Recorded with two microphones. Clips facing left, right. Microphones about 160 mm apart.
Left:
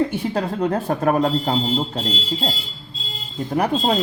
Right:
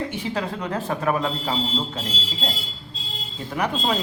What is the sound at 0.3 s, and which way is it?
Speech, 35° left (ahead or behind).